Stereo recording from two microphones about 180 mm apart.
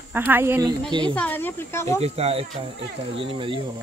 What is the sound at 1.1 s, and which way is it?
Speech, 10° left (ahead or behind).